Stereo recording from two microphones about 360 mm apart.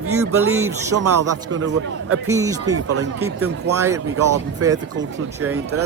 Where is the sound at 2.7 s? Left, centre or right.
Right.